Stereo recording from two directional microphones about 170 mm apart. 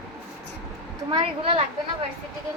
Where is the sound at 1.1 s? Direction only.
30° right (ahead or behind).